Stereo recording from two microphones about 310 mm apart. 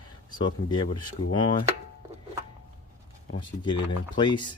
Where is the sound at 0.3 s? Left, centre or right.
Centre.